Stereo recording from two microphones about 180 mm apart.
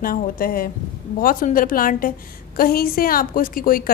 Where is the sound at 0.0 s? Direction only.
55° left (ahead or behind).